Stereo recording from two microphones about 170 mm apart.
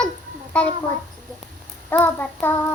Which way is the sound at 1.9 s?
10° left (ahead or behind).